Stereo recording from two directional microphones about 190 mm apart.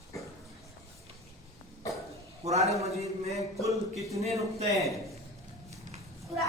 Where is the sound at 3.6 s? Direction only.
15° right (ahead or behind).